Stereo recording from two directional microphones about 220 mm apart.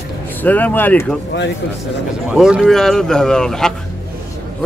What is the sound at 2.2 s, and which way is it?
Speech, 5° right (ahead or behind).